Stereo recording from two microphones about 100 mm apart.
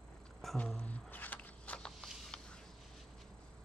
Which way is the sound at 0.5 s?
15° left (ahead or behind).